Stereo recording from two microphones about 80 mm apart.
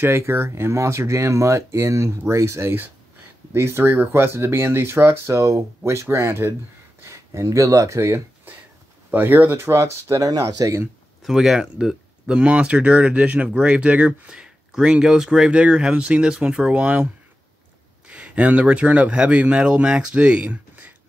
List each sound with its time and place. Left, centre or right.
0.0 s speech: right
11.2 s speech: centre; by 20.9 s right